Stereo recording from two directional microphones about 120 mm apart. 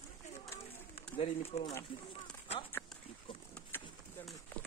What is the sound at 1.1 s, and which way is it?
Speech, 55° left (ahead or behind).